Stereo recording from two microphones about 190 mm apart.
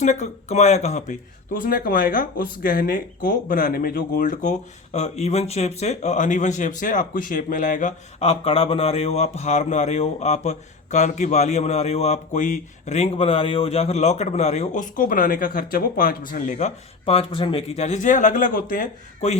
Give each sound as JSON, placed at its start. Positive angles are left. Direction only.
{"t": 0.0, "sound": "speech", "side_deg": 40}
{"t": 1.6, "sound": "speech", "side_deg": 50}